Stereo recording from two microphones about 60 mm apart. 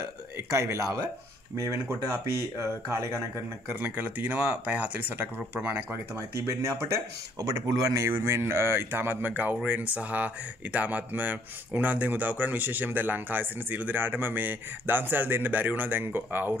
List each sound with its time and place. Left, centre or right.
0.5 s speech: right
3.8 s speech: right
6.1 s speech: right
8.1 s speech: right